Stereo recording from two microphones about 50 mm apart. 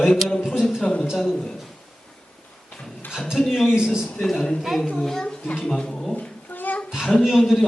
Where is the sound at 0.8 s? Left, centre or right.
Left.